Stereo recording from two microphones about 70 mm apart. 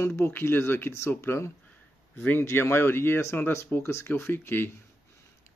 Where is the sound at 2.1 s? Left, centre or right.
Left.